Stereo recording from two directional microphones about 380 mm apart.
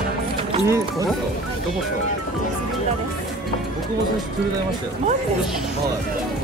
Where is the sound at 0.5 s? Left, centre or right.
Centre.